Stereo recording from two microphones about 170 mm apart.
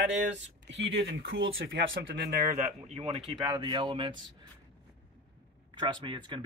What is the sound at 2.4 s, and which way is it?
Speech, 50° right (ahead or behind).